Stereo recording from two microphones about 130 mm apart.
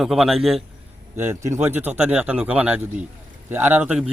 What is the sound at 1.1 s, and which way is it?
A man's voice, 20° right (ahead or behind).